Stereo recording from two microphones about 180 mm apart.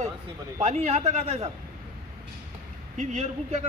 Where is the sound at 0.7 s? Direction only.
40° right (ahead or behind).